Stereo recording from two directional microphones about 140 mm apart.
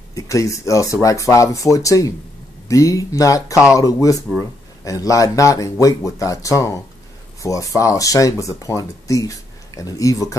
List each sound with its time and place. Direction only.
0.1 s speech: 25° left (ahead or behind)